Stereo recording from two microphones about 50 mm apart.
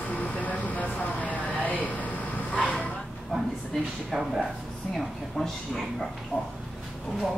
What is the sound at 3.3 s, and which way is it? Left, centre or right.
A woman's voice, centre.